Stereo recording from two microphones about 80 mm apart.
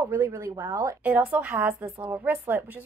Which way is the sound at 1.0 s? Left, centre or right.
Right.